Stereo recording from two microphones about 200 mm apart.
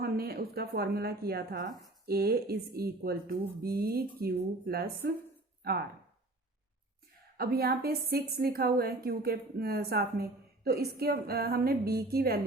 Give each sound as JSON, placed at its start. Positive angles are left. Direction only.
{"t": 0.0, "sound": "a woman's voice", "side_deg": -50}
{"t": 7.3, "sound": "a woman's voice", "side_deg": -50}